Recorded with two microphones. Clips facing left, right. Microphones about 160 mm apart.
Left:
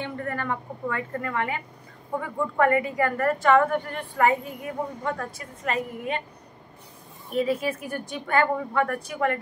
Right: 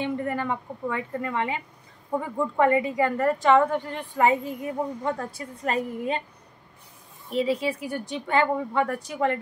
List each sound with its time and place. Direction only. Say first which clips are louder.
0.0 s a woman's voice: right 3 dB; 15° right (ahead or behind); by 6.2 s 35° right (ahead or behind)
7.2 s a woman's voice: even; 20° right (ahead or behind)